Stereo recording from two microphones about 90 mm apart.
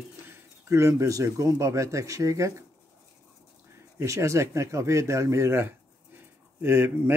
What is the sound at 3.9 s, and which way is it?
Speech, 35° right (ahead or behind).